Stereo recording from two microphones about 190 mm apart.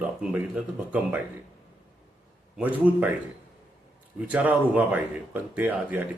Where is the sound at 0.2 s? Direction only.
5° right (ahead or behind).